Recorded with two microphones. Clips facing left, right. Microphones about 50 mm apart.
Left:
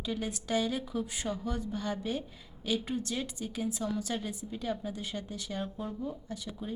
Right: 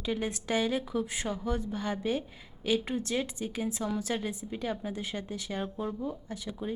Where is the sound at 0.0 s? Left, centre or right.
Centre.